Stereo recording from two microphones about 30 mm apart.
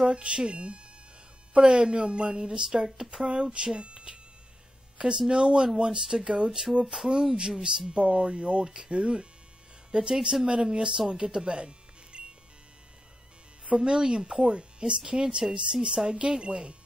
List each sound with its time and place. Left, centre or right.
0.1 s a woman's voice: right
7.0 s speech: centre
7.3 s a woman's voice: right
8.6 s speech: right
8.9 s a woman's voice: right
13.7 s a woman's voice: right